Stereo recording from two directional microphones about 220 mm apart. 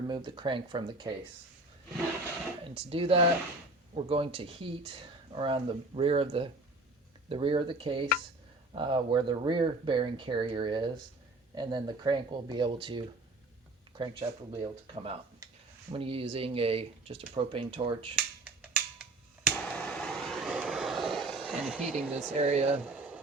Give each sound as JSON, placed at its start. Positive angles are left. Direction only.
{"t": 0.1, "sound": "speech", "side_deg": -20}
{"t": 2.6, "sound": "speech", "side_deg": -25}
{"t": 14.0, "sound": "speech", "side_deg": -20}
{"t": 18.4, "sound": "a sound", "side_deg": -5}
{"t": 19.5, "sound": "vehicle", "side_deg": 5}
{"t": 22.4, "sound": "speech", "side_deg": -25}
{"t": 22.7, "sound": "a sound", "side_deg": -5}